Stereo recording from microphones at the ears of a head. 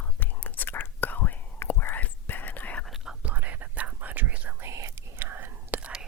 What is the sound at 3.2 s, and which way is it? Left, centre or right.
Whispering, right.